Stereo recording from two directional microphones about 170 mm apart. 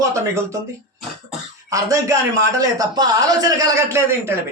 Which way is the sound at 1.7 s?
20° right (ahead or behind).